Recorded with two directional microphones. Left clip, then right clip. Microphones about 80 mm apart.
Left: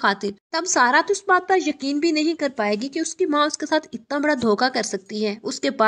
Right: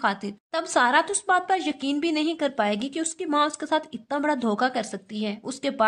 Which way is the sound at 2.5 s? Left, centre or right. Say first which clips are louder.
Left 2 dB; centre.